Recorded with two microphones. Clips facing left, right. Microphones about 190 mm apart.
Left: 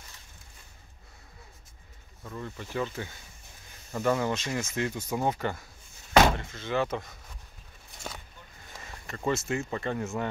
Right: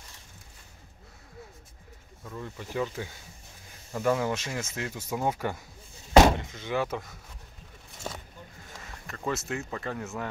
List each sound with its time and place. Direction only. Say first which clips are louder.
2.2 s speech: even; 5° right (ahead or behind)
8.8 s speech: left 3 dB; centre (ahead or behind)